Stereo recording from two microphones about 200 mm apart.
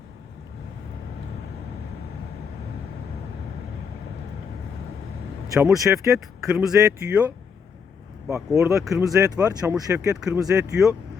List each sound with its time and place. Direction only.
5.5 s speech: 15° right (ahead or behind)
6.1 s speech: centre (ahead or behind)
8.7 s speech: centre (ahead or behind)
9.0 s speech: 15° right (ahead or behind)